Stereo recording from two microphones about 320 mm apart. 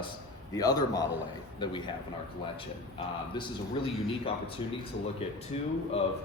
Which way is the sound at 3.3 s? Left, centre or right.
Centre.